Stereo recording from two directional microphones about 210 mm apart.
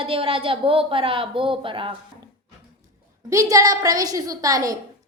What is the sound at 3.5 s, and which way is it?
A woman's voice, 15° right (ahead or behind).